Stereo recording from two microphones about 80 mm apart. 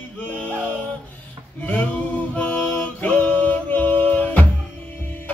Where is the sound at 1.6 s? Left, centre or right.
Centre.